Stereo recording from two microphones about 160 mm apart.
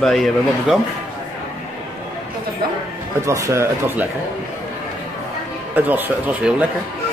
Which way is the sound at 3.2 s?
20° right (ahead or behind).